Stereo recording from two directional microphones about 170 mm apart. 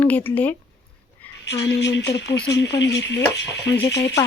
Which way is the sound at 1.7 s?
90° left.